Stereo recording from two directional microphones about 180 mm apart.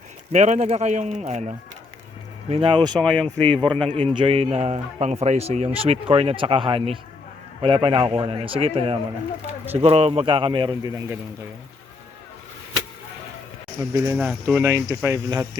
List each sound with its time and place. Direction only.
0.3 s a man's voice: 40° right (ahead or behind)
3.0 s speech: 5° left (ahead or behind)
3.6 s a man's voice: 25° right (ahead or behind)
13.9 s speech: 15° right (ahead or behind)
14.2 s speech: 5° right (ahead or behind)